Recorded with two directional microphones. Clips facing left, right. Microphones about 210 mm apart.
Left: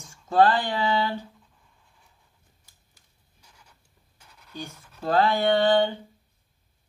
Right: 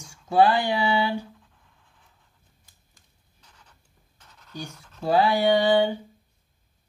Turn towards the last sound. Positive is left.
turn(degrees=-10)  # may be behind; listen again after turning